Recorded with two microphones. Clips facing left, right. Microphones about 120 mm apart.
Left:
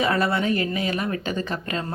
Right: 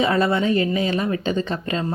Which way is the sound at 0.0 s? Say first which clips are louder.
Right 3 dB; 25° right (ahead or behind).